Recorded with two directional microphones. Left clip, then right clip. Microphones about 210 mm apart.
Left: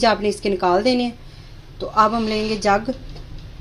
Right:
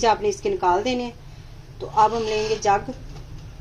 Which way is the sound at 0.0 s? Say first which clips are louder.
Left 2 dB; 35° left (ahead or behind).